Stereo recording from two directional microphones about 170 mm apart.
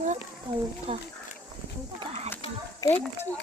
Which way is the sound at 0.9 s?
35° right (ahead or behind).